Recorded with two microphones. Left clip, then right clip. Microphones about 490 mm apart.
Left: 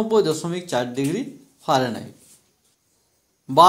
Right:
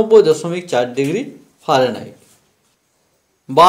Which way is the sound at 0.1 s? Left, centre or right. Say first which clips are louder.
Right 9 dB; left.